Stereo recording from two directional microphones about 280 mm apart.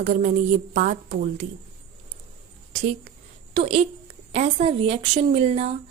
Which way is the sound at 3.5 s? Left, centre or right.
Centre.